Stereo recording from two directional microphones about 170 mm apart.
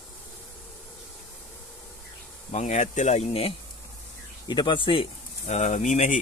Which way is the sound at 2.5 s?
45° left (ahead or behind).